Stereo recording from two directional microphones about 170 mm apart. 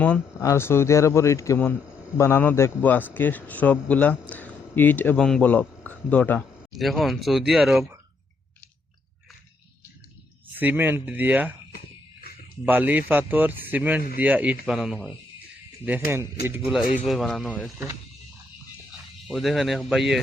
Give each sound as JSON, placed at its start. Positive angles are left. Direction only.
{"t": 0.0, "sound": "a man's voice", "side_deg": 10}
{"t": 10.6, "sound": "a man's voice", "side_deg": -10}
{"t": 12.2, "sound": "a sound", "side_deg": 60}
{"t": 12.6, "sound": "a man's voice", "side_deg": -10}
{"t": 19.3, "sound": "speech", "side_deg": 0}